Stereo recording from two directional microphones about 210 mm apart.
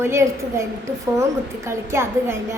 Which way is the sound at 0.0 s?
15° right (ahead or behind).